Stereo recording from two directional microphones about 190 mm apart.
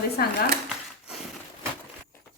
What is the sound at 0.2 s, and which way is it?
Speech, 55° left (ahead or behind).